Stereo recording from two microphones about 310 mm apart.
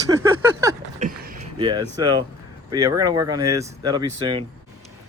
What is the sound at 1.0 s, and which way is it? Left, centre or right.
Speech, right.